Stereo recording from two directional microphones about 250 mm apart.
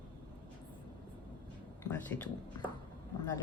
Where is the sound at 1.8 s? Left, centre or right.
Centre.